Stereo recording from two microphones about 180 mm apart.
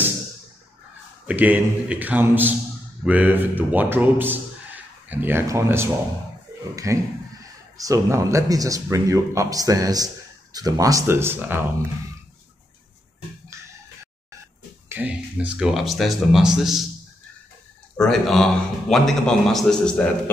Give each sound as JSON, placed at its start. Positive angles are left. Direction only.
{"t": 1.2, "sound": "a man's voice", "side_deg": -10}
{"t": 14.9, "sound": "a man's voice", "side_deg": -10}
{"t": 17.9, "sound": "a man's voice", "side_deg": 5}